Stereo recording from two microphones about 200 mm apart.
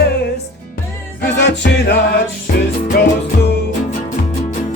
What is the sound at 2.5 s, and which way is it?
Music, 45° left (ahead or behind).